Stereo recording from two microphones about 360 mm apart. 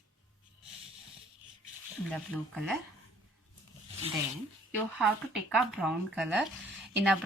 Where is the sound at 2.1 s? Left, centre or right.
Centre.